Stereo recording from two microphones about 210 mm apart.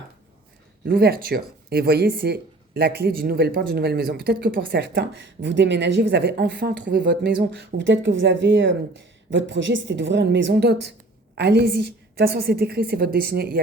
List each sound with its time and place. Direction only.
0.9 s a woman's voice: 45° right (ahead or behind)